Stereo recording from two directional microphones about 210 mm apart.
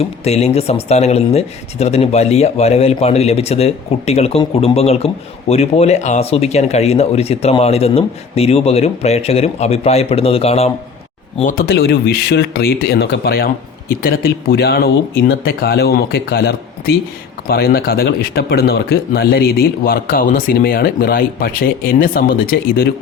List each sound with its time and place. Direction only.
0.0 s speech: 30° left (ahead or behind)
11.3 s speech: 40° left (ahead or behind)